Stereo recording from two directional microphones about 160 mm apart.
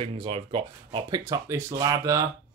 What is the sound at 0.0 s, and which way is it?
Speech, 35° right (ahead or behind).